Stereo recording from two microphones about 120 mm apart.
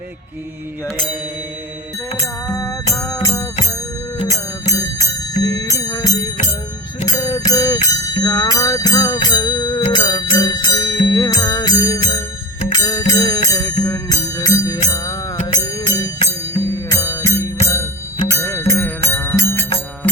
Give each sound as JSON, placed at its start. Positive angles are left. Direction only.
{"t": 2.1, "sound": "music", "side_deg": 25}
{"t": 7.0, "sound": "a sound", "side_deg": 30}
{"t": 9.9, "sound": "music", "side_deg": 35}